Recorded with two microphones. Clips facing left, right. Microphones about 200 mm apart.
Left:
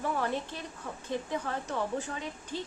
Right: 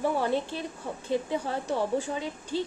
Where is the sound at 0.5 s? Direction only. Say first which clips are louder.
Right 6 dB; 30° right (ahead or behind).